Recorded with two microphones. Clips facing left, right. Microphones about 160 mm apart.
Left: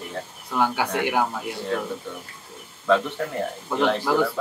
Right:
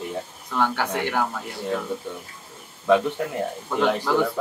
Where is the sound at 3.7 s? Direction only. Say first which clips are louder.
Even; 5° left (ahead or behind).